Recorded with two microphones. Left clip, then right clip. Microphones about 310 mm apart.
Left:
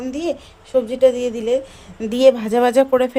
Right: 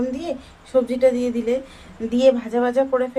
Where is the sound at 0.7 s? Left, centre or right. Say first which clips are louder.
Left 2 dB; left.